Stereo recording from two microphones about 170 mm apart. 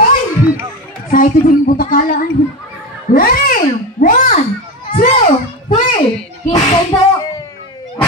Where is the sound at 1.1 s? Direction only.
55° left (ahead or behind).